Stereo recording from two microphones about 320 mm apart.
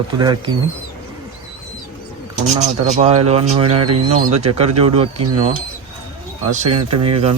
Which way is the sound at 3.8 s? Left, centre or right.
Right.